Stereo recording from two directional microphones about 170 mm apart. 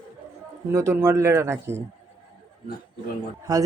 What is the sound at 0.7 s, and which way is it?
Speech, 15° right (ahead or behind).